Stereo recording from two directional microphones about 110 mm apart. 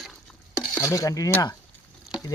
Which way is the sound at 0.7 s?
25° left (ahead or behind).